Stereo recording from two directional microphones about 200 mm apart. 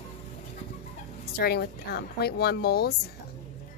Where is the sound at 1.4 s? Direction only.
50° left (ahead or behind).